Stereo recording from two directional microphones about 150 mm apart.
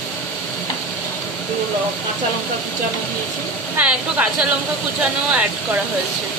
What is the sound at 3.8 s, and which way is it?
Speech, 10° right (ahead or behind).